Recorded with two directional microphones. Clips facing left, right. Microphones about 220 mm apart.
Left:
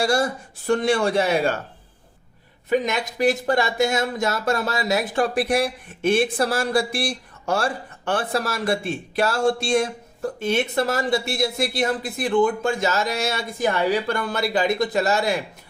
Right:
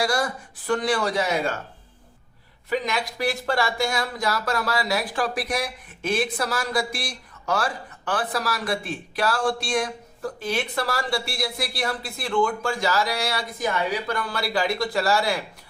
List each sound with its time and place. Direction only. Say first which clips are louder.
0.0 s speech: left 3 dB; 25° left (ahead or behind)
2.6 s speech: left 4 dB; 20° left (ahead or behind)